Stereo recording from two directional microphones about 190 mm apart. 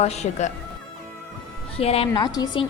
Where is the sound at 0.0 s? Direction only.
35° left (ahead or behind).